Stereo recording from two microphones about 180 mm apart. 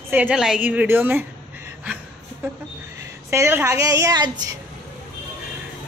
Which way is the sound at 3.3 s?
15° right (ahead or behind).